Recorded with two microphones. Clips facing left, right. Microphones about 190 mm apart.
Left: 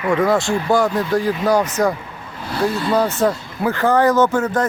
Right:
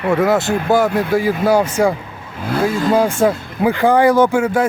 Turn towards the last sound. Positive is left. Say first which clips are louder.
# right 3 dB
turn(degrees=-10)  # may be behind; listen again after turning